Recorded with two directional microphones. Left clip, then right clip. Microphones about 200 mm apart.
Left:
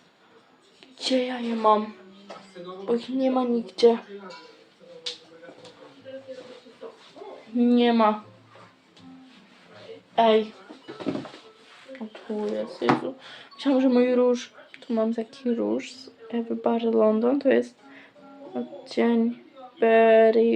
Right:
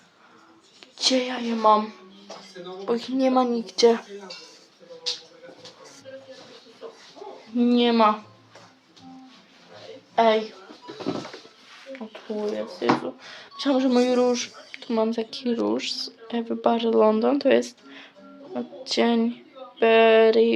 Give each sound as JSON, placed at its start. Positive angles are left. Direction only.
{"t": 0.9, "sound": "speech", "side_deg": 0}
{"t": 7.5, "sound": "speech", "side_deg": 5}
{"t": 10.2, "sound": "speech", "side_deg": 5}
{"t": 12.3, "sound": "a woman's voice", "side_deg": 20}